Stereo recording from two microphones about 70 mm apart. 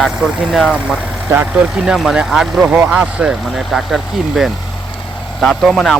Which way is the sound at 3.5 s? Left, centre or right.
Centre.